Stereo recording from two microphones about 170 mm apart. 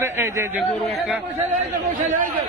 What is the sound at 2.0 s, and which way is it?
Speech, 50° right (ahead or behind).